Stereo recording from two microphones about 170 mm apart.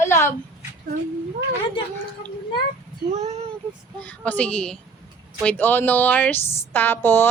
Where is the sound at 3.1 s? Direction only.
40° right (ahead or behind).